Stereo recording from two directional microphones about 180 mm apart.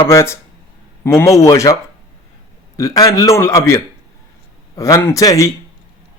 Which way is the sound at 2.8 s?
20° left (ahead or behind).